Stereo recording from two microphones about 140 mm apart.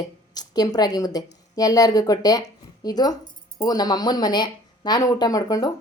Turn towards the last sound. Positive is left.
turn(degrees=25)  # may be behind; listen again after turning